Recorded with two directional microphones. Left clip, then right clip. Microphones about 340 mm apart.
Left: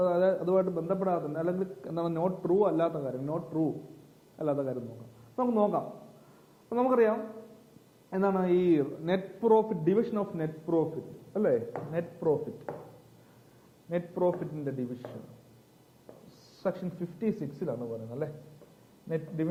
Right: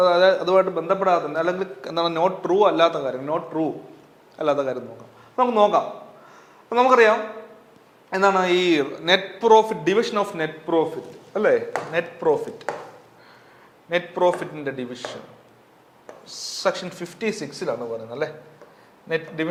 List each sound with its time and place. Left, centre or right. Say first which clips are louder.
0.0 s a man's voice: right 10 dB; centre
13.9 s a man's voice: right 9 dB; centre
16.6 s a man's voice: right 9 dB; centre